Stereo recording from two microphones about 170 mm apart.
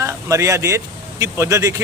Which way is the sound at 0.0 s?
20° right (ahead or behind).